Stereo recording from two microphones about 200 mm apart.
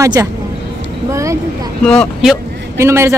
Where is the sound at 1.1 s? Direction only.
15° right (ahead or behind).